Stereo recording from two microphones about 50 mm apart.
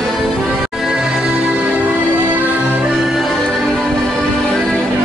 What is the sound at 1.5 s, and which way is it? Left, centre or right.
Music, right.